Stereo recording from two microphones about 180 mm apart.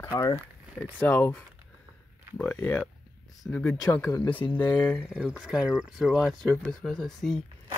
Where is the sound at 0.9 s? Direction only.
10° left (ahead or behind).